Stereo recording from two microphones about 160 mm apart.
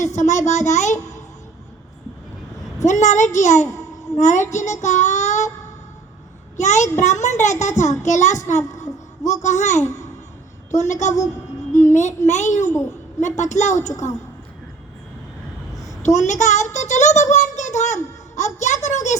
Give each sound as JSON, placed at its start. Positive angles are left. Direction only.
{"t": 0.0, "sound": "a child's voice", "side_deg": 50}
{"t": 2.8, "sound": "a child's voice", "side_deg": 45}
{"t": 3.7, "sound": "a sound", "side_deg": 20}
{"t": 4.2, "sound": "a child's voice", "side_deg": 50}
{"t": 4.5, "sound": "child singing", "side_deg": 45}
{"t": 6.6, "sound": "a child's voice", "side_deg": 45}
{"t": 15.7, "sound": "a sound", "side_deg": 20}
{"t": 16.0, "sound": "a child's voice", "side_deg": 45}